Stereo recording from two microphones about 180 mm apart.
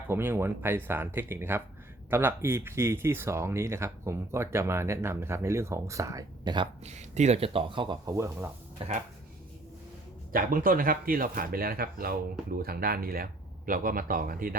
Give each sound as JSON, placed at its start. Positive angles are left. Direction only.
{"t": 0.1, "sound": "speech", "side_deg": -10}
{"t": 6.8, "sound": "speech", "side_deg": -40}
{"t": 8.8, "sound": "speech", "side_deg": -30}
{"t": 10.3, "sound": "speech", "side_deg": -50}